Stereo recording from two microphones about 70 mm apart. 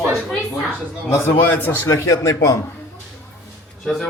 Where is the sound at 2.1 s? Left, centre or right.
Left.